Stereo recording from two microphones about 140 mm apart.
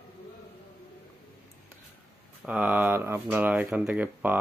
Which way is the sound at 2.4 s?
10° right (ahead or behind).